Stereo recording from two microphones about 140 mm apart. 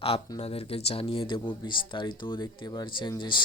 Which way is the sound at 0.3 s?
45° left (ahead or behind).